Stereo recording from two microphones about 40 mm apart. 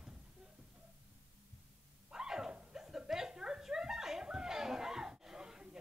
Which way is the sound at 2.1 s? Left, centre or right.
Centre.